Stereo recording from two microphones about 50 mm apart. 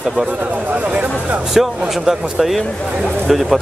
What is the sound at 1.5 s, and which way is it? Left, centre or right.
Speech, centre.